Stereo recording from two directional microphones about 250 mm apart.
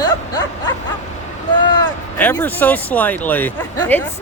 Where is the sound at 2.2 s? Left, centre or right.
Centre.